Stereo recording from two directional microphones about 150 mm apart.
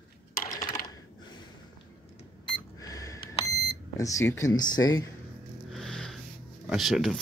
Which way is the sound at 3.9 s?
20° left (ahead or behind).